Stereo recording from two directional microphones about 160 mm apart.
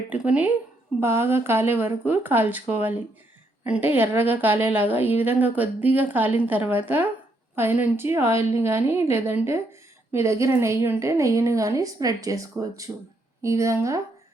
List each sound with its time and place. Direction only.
0.1 s a woman's voice: 10° right (ahead or behind)